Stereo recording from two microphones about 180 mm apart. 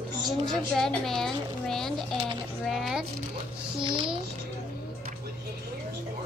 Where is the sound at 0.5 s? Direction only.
Centre (ahead or behind).